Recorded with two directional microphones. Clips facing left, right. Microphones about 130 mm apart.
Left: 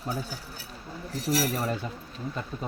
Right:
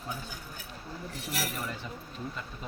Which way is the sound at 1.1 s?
40° left (ahead or behind).